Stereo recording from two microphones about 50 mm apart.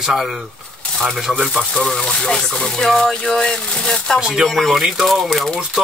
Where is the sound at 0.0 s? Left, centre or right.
Centre.